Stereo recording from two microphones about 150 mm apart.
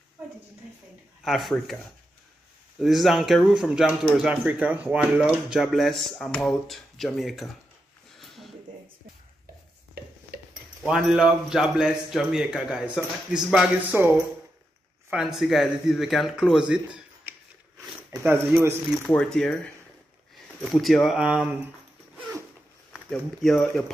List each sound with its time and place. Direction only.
1.2 s speech: centre (ahead or behind)
2.8 s speech: centre (ahead or behind)
10.0 s stir: 90° right
10.9 s speech: 5° right (ahead or behind)
19.0 s speech: 5° left (ahead or behind)
22.9 s speech: 5° left (ahead or behind)